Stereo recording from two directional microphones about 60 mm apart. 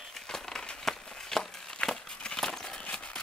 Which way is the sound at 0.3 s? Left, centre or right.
Centre.